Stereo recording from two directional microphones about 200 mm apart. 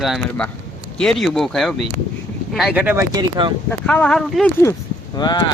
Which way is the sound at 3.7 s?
5° left (ahead or behind).